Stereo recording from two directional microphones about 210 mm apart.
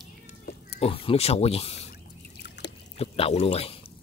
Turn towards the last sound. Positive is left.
turn(degrees=30)  # may be behind; listen again after turning